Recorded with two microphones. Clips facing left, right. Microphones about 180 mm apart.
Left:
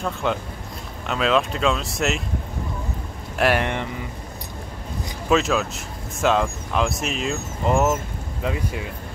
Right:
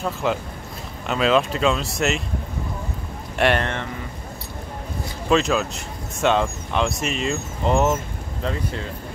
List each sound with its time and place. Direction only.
0.0 s speech: centre (ahead or behind)
3.3 s speech: centre (ahead or behind)
5.3 s speech: centre (ahead or behind)